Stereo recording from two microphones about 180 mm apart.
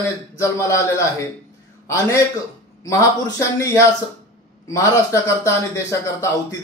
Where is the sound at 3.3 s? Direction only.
15° left (ahead or behind).